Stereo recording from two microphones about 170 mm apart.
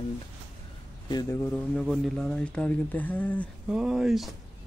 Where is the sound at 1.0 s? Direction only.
25° left (ahead or behind).